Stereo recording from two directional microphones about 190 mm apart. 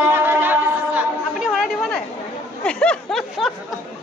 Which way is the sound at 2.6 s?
5° left (ahead or behind).